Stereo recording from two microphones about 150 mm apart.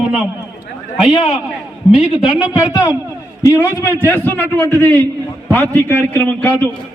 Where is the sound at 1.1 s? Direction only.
40° left (ahead or behind).